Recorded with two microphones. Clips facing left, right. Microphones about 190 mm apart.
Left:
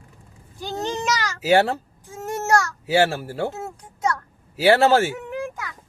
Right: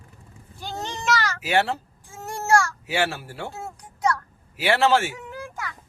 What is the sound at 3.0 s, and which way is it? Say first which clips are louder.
Speech: left 6 dB; 45° left (ahead or behind).